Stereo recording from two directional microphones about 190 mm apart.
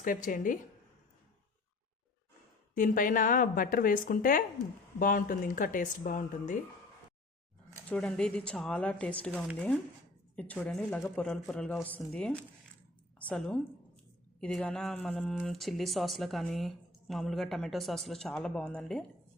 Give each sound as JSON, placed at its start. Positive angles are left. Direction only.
{"t": 0.0, "sound": "speech", "side_deg": 45}
{"t": 2.7, "sound": "speech", "side_deg": 45}
{"t": 7.9, "sound": "speech", "side_deg": 5}
{"t": 10.3, "sound": "a woman's voice", "side_deg": 5}